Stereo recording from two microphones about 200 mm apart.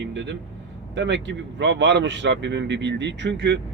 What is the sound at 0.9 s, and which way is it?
Speech, 65° right (ahead or behind).